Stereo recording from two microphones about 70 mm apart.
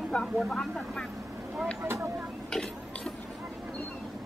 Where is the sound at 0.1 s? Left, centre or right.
Centre.